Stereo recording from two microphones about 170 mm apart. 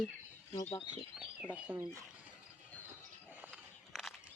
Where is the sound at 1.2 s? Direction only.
5° right (ahead or behind).